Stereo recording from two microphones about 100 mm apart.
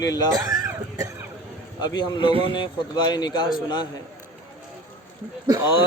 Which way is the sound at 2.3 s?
65° right (ahead or behind).